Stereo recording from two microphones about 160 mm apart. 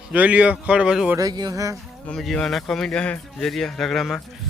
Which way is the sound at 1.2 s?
25° right (ahead or behind).